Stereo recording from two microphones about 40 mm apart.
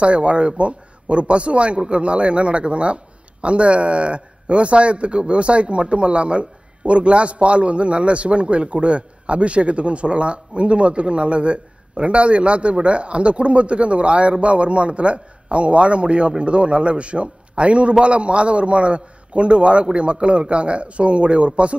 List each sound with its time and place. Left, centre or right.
0.0 s a man's voice: right